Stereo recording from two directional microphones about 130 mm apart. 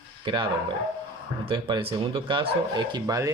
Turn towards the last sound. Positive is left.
turn(degrees=-25)  # may be behind; listen again after turning